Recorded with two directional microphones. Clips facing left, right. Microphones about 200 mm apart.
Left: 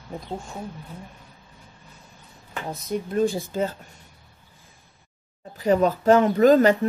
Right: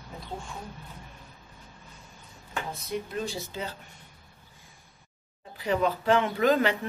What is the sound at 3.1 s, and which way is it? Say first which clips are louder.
Speech: left 10 dB; 50° left (ahead or behind).